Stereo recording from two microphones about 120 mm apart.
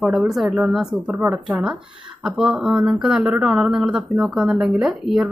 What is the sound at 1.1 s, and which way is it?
A woman's voice, 20° right (ahead or behind).